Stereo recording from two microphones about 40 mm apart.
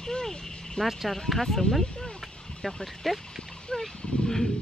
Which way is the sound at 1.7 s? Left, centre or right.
Left.